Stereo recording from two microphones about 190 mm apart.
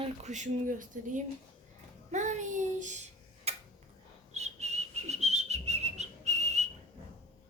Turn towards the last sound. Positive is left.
turn(degrees=-35)  # may be behind; listen again after turning